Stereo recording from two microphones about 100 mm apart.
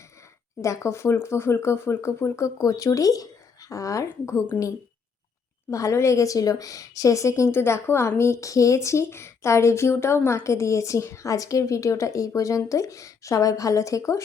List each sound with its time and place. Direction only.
0.6 s speech: 30° left (ahead or behind)
5.7 s speech: 30° left (ahead or behind)